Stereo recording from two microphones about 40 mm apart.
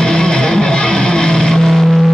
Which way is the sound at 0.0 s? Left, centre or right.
Centre.